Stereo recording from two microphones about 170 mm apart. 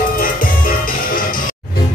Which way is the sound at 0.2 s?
55° left (ahead or behind).